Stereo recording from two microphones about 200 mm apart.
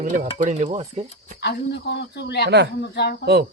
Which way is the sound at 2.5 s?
60° right (ahead or behind).